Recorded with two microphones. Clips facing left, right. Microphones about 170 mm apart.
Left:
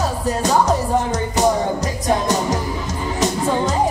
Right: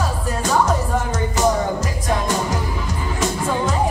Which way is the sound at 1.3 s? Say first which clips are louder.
Left 1 dB; 40° left (ahead or behind).